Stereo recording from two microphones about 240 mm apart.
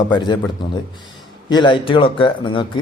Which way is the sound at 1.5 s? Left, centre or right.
Centre.